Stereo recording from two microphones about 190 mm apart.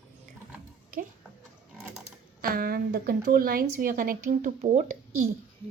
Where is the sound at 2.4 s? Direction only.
50° right (ahead or behind).